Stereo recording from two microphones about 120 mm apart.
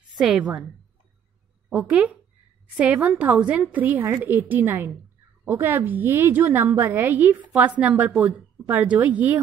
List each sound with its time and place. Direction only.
0.1 s a woman's voice: 5° right (ahead or behind)
1.7 s a woman's voice: 10° right (ahead or behind)